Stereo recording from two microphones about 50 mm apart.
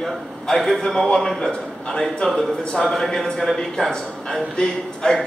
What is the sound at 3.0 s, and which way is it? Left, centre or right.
A man's voice, centre.